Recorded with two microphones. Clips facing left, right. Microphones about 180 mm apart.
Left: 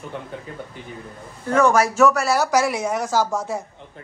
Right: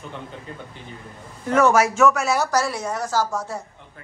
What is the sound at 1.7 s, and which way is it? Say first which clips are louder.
Speech: left 1 dB; 5° right (ahead or behind).